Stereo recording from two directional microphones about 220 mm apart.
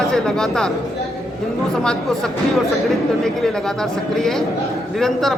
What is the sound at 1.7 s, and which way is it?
Speech, 5° left (ahead or behind).